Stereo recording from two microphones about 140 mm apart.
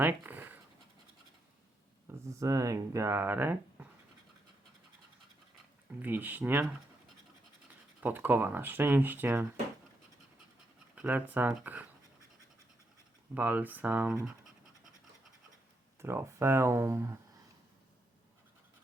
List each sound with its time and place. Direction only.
0.0 s speech: 15° right (ahead or behind)
2.2 s speech: 20° right (ahead or behind)
6.0 s speech: 15° right (ahead or behind)
8.0 s speech: 15° right (ahead or behind)
10.9 s speech: 10° right (ahead or behind)
13.3 s speech: 10° right (ahead or behind)
16.0 s speech: 20° right (ahead or behind)